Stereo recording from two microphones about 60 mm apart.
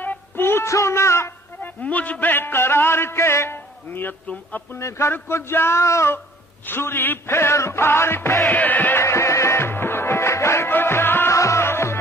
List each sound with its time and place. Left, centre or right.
0.0 s music: left
0.7 s speech: left
1.6 s music: left
4.3 s music: left
4.7 s speech: left
6.1 s music: left
8.5 s music: left
9.0 s music: left
10.7 s music: left
11.3 s music: left